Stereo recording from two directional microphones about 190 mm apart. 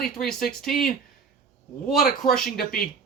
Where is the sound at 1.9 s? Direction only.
Centre (ahead or behind).